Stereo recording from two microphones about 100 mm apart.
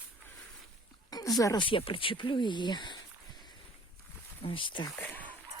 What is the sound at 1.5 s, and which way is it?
Speech, 60° left (ahead or behind).